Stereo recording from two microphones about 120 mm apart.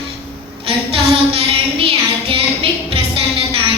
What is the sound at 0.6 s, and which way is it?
Child singing, 55° right (ahead or behind).